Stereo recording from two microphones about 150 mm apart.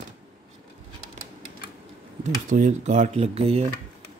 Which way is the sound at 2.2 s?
55° right (ahead or behind).